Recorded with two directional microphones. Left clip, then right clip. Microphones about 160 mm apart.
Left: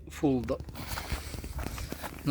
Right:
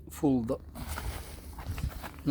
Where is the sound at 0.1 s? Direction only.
35° right (ahead or behind).